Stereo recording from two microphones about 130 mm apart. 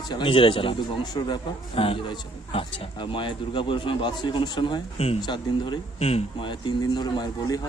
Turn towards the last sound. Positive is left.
turn(degrees=35)  # may be behind; listen again after turning